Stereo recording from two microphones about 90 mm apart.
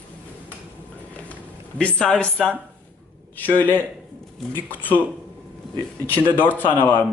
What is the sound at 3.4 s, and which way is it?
A man's voice, 20° left (ahead or behind).